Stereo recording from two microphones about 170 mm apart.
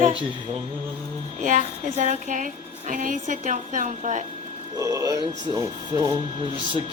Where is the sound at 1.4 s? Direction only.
45° right (ahead or behind).